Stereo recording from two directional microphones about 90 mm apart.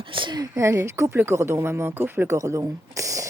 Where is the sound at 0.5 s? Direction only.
30° right (ahead or behind).